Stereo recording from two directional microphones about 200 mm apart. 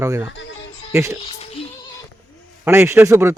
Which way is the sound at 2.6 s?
10° right (ahead or behind).